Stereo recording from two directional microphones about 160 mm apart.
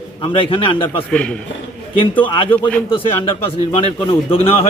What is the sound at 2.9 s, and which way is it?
A man's voice, 35° left (ahead or behind).